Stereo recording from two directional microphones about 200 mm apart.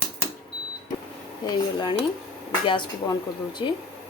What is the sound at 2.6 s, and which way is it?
Speech, 20° left (ahead or behind).